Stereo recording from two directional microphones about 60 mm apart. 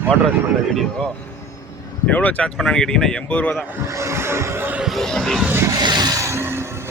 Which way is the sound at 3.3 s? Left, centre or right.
Left.